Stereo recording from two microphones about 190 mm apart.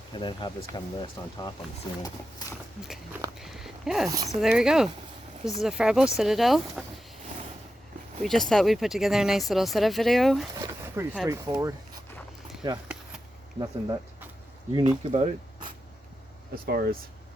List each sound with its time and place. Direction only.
0.1 s speech: 25° left (ahead or behind)
2.8 s speech: centre (ahead or behind)
8.2 s speech: centre (ahead or behind)
10.9 s speech: 10° right (ahead or behind)
13.6 s speech: 20° right (ahead or behind)
16.6 s speech: 55° right (ahead or behind)